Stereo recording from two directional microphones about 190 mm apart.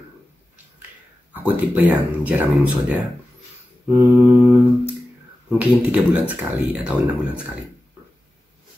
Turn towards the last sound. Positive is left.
turn(degrees=-5)  # may be behind; listen again after turning